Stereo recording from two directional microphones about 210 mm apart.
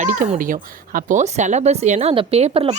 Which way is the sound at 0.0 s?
40° right (ahead or behind).